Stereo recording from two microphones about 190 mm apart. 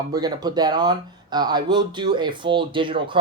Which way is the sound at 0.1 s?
20° right (ahead or behind).